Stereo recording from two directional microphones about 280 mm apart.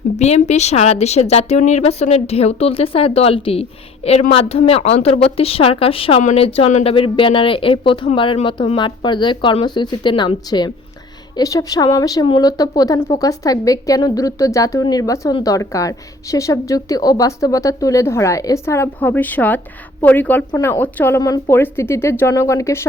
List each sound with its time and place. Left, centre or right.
0.2 s a woman's voice: left